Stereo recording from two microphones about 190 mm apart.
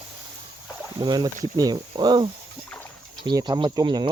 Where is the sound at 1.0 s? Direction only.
20° right (ahead or behind).